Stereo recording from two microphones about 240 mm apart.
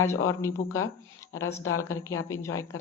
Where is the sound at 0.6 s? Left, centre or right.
Left.